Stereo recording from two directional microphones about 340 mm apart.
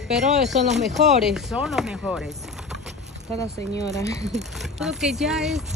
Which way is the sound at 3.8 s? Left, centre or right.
Centre.